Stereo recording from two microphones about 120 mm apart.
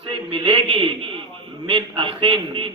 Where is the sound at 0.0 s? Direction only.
50° right (ahead or behind).